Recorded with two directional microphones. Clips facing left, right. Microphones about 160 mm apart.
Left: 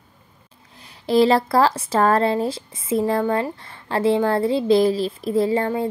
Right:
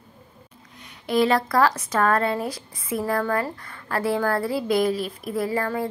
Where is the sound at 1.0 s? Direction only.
30° left (ahead or behind).